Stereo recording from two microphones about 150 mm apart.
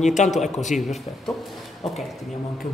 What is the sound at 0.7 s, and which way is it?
Speech, centre (ahead or behind).